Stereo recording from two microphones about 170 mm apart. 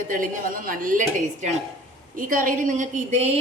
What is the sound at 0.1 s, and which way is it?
Speech, 55° right (ahead or behind).